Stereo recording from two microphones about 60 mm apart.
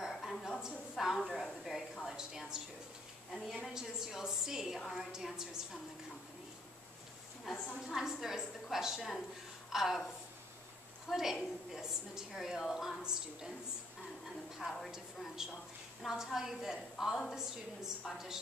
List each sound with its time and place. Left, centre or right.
0.2 s a sound: centre
0.6 s a woman's voice: centre
3.3 s a woman's voice: centre
3.7 s a woman's voice: centre
5.1 s a woman's voice: centre
7.5 s a woman's voice: centre
14.6 s a woman's voice: right
15.4 s a woman's voice: centre